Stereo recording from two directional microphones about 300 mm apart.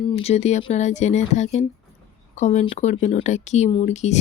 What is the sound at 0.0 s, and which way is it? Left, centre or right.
Speech, centre.